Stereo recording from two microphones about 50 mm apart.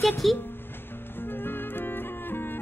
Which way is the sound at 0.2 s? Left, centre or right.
Centre.